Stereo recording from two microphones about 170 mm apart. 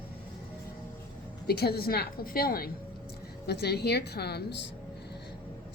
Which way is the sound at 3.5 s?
70° left (ahead or behind).